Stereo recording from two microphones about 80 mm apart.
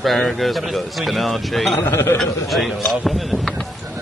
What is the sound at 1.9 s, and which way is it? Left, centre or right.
Speech, left.